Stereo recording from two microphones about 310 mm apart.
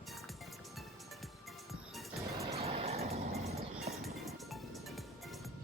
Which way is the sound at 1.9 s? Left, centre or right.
Centre.